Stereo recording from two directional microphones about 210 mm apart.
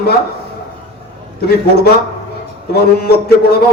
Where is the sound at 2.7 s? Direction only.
50° left (ahead or behind).